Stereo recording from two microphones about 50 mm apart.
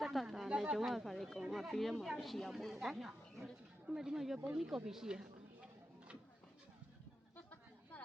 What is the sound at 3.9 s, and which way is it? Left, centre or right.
Speech, centre.